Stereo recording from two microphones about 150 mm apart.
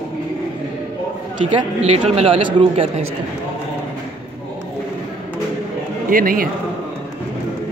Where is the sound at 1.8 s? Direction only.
45° right (ahead or behind).